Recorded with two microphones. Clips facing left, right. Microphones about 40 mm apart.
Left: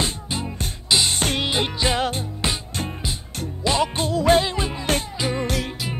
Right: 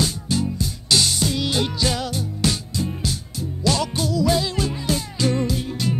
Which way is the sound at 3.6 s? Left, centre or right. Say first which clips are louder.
Left 1 dB; left.